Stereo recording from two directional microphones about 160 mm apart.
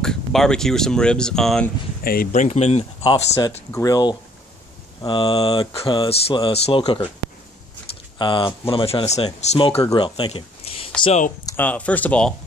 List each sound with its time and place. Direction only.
0.0 s speech: 5° left (ahead or behind)
2.3 s speech: 45° left (ahead or behind)
3.7 s speech: 20° left (ahead or behind)
8.2 s speech: 30° left (ahead or behind)
11.4 s speech: 10° left (ahead or behind)